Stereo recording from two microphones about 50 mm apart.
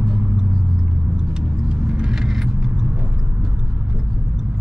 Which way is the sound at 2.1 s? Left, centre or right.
Centre.